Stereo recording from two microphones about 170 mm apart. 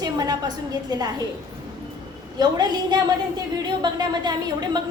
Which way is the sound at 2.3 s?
25° right (ahead or behind).